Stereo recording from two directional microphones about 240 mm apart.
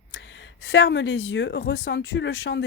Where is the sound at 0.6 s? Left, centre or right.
Left.